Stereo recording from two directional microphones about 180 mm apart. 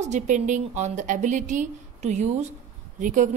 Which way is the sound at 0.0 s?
45° right (ahead or behind).